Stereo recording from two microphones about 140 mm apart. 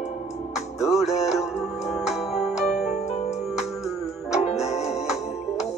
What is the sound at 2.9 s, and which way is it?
Music, 55° left (ahead or behind).